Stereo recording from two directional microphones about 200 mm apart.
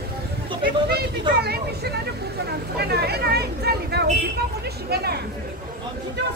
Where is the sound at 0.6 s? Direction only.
50° right (ahead or behind).